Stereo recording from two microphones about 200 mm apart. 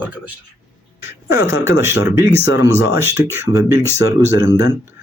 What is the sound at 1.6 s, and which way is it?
Speech, 15° right (ahead or behind).